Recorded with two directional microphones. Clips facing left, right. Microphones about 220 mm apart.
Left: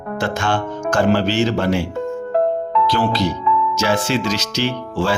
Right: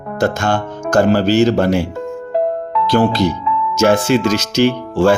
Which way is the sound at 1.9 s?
Centre (ahead or behind).